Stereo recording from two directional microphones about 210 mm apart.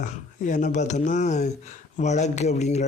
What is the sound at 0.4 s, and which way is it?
Speech, 35° left (ahead or behind).